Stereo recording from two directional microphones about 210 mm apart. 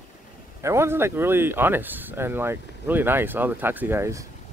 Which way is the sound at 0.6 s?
15° right (ahead or behind).